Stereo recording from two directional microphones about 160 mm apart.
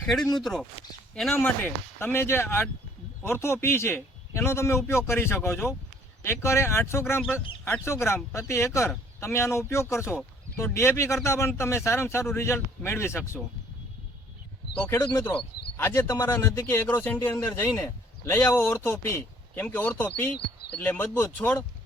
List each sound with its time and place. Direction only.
0.0 s speech: centre (ahead or behind)
1.4 s a man's voice: 10° left (ahead or behind)
14.8 s a man's voice: 15° left (ahead or behind)